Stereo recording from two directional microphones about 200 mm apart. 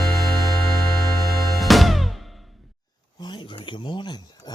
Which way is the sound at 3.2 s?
25° left (ahead or behind).